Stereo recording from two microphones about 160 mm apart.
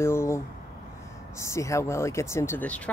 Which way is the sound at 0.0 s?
15° left (ahead or behind).